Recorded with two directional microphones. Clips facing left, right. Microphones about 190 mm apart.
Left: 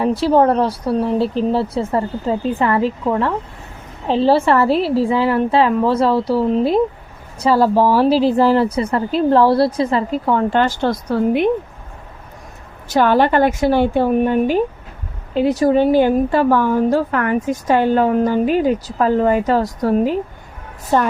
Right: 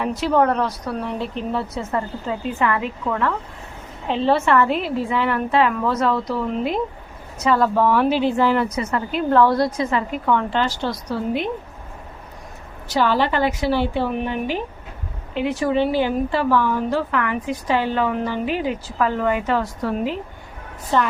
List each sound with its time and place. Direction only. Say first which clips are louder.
0.0 s speech: left 5 dB; 30° left (ahead or behind)
10.5 s a woman's voice: left 6 dB; 50° left (ahead or behind)
12.9 s a woman's voice: left 5 dB; 55° left (ahead or behind)